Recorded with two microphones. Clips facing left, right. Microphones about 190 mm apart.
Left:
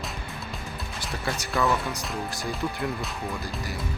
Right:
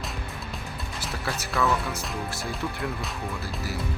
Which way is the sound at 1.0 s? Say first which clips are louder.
Left 1 dB; centre (ahead or behind).